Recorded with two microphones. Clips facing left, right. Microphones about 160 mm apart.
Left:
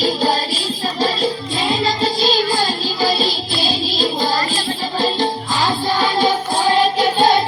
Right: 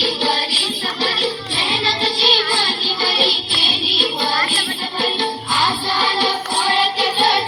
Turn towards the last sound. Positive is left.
turn(degrees=45)  # may be behind; listen again after turning